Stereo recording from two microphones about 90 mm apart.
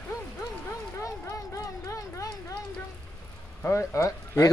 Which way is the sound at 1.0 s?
40° left (ahead or behind).